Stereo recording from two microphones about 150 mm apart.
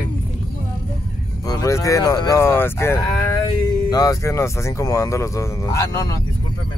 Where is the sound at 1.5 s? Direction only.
20° left (ahead or behind).